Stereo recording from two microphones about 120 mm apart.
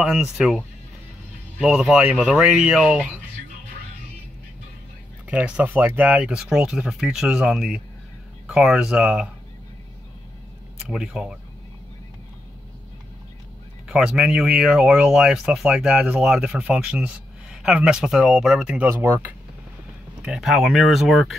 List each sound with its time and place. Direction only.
0.0 s speech: 5° right (ahead or behind)
1.6 s speech: 5° right (ahead or behind)
5.2 s speech: 10° right (ahead or behind)
10.8 s speech: 5° right (ahead or behind)
13.8 s speech: 5° right (ahead or behind)
18.9 s speech: 20° right (ahead or behind)
20.2 s speech: 5° right (ahead or behind)